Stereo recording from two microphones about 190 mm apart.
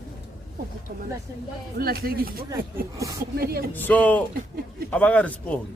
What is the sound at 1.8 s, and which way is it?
Speech, 50° right (ahead or behind).